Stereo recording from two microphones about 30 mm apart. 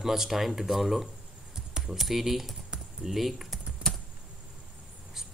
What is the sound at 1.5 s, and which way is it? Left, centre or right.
Keys jangling, right.